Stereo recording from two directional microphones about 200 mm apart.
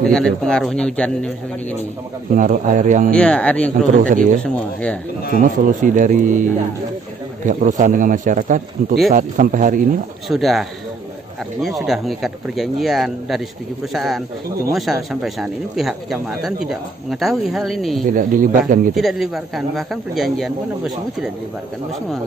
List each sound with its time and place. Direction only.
0.1 s speech: 5° left (ahead or behind)
2.3 s a man's voice: 40° right (ahead or behind)
3.1 s speech: 5° left (ahead or behind)
3.9 s a man's voice: 40° right (ahead or behind)
5.4 s a man's voice: 40° right (ahead or behind)
10.2 s speech: centre (ahead or behind)
18.0 s a man's voice: 40° right (ahead or behind)
18.9 s speech: centre (ahead or behind)